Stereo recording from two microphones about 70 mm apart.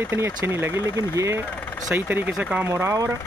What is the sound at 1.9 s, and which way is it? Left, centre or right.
Speech, right.